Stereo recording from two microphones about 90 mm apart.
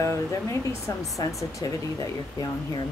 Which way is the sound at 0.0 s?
35° left (ahead or behind).